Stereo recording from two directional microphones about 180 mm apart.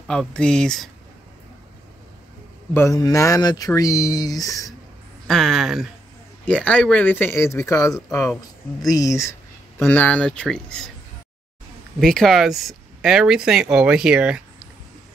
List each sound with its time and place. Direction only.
0.0 s speech: centre (ahead or behind)
2.7 s speech: 15° left (ahead or behind)
5.3 s speech: centre (ahead or behind)
12.0 s speech: centre (ahead or behind)